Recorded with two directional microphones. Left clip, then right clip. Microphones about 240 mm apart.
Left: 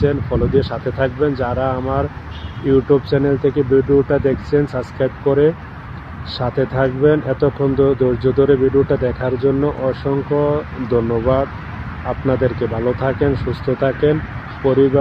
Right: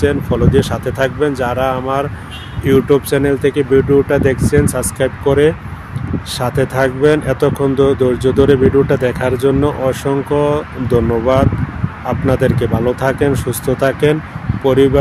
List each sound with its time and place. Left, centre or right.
0.0 s speech: right